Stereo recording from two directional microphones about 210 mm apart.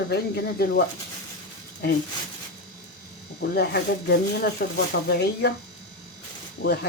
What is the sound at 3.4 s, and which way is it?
Speech, 50° left (ahead or behind).